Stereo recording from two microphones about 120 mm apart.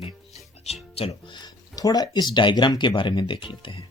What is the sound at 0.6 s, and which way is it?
Music, 60° left (ahead or behind).